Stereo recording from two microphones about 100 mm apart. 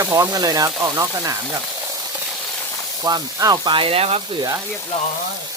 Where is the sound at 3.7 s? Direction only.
75° right (ahead or behind).